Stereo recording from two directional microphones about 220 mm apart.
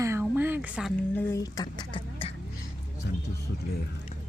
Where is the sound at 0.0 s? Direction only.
10° right (ahead or behind).